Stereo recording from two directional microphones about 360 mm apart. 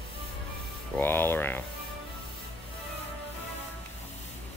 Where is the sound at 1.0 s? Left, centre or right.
Centre.